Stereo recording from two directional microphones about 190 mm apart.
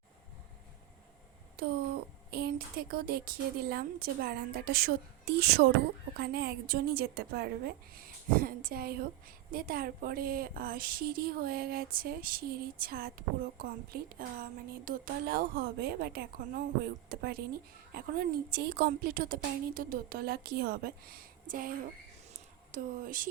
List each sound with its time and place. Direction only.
2.3 s a woman's voice: 55° right (ahead or behind)